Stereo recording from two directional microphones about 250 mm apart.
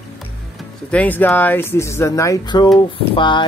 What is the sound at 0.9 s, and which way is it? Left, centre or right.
Speech, centre.